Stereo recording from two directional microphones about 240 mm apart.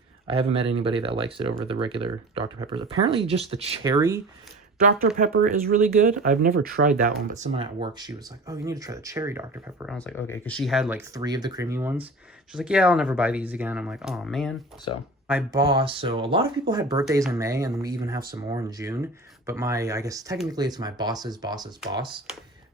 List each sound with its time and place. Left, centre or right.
0.3 s speech: right
3.8 s speech: centre
4.9 s speech: right; by 9.9 s centre
9.9 s speech: centre
15.5 s speech: centre